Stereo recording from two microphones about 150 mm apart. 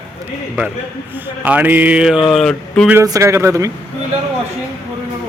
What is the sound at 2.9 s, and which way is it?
Speech, 20° right (ahead or behind).